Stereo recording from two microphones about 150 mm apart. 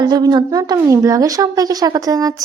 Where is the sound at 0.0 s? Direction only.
25° right (ahead or behind).